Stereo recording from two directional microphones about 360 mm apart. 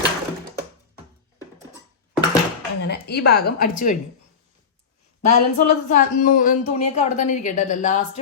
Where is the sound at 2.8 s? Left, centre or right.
Left.